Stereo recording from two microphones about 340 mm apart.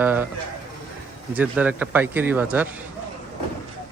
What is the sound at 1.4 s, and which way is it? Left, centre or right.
Speech, centre.